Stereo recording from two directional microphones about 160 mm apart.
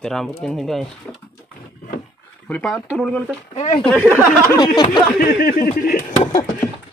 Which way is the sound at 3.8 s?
10° left (ahead or behind).